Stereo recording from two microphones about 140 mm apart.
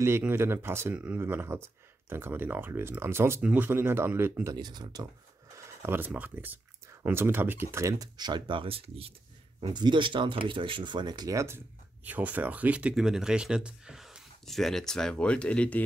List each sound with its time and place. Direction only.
0.0 s speech: 15° right (ahead or behind)
5.6 s speech: 15° right (ahead or behind); by 15.8 s 10° left (ahead or behind)